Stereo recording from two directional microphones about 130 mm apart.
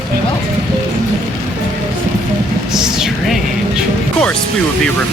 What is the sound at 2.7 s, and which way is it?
Speech, 5° right (ahead or behind).